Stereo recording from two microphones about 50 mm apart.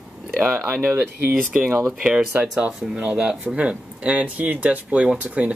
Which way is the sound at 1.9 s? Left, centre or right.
Centre.